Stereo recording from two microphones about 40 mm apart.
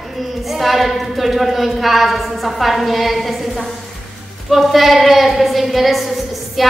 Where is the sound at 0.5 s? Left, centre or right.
Centre.